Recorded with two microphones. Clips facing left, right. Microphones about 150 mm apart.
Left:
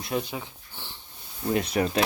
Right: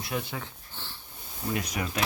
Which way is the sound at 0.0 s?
20° left (ahead or behind).